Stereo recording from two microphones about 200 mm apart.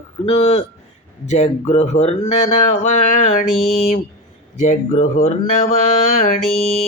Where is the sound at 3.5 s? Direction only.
Centre (ahead or behind).